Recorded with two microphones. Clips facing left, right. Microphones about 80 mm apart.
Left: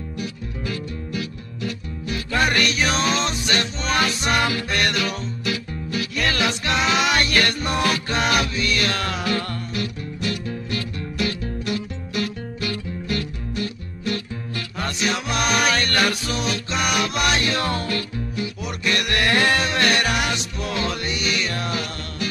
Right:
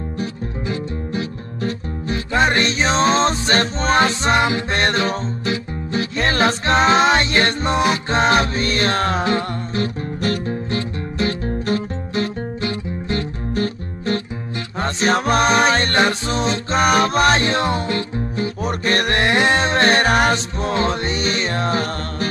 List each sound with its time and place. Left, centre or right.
0.2 s music: right